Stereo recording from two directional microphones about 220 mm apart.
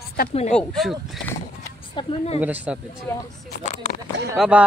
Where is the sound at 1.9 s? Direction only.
25° left (ahead or behind).